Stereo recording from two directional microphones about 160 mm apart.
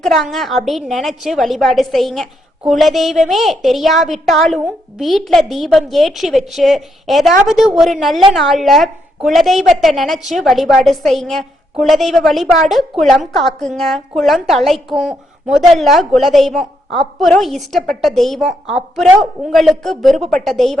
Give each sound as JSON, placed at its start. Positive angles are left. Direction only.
{"t": 0.0, "sound": "a woman's voice", "side_deg": 0}